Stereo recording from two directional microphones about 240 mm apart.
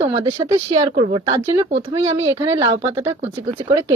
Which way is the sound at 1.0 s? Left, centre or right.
Right.